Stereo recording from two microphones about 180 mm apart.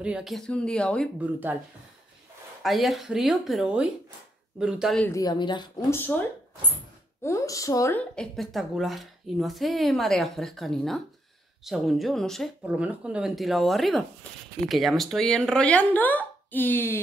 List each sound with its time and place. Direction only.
0.0 s speech: 5° right (ahead or behind)
1.2 s speech: 10° right (ahead or behind)
2.6 s speech: centre (ahead or behind)
5.0 s speech: 20° left (ahead or behind)
5.9 s speech: 10° left (ahead or behind)
7.2 s speech: 20° left (ahead or behind)